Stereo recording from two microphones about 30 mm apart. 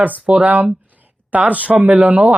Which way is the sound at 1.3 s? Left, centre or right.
Right.